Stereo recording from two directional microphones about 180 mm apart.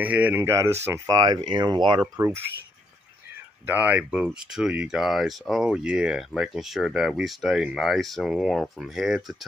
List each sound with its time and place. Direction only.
0.0 s speech: 10° right (ahead or behind); by 2.0 s 25° right (ahead or behind)
2.1 s speech: 15° right (ahead or behind)
3.6 s speech: 10° right (ahead or behind)